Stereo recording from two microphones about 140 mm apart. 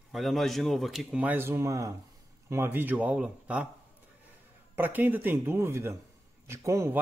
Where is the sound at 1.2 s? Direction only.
15° right (ahead or behind).